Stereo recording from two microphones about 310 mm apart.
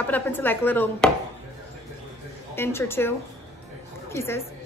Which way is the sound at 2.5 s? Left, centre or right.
Centre.